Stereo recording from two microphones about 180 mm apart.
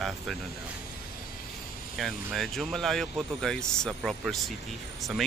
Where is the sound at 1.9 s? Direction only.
Centre (ahead or behind).